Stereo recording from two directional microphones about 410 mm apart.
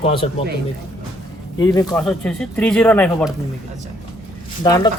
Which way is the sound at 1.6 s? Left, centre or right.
Centre.